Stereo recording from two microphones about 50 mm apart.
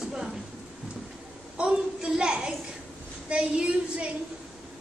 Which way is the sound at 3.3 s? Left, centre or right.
Right.